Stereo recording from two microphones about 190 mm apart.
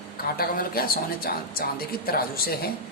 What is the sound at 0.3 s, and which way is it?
Speech, 50° left (ahead or behind).